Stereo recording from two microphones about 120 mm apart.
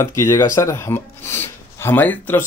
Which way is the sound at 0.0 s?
25° left (ahead or behind).